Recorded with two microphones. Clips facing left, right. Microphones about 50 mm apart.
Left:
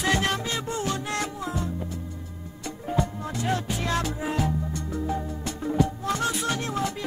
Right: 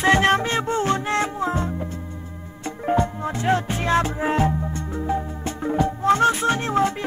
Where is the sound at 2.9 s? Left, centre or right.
Right.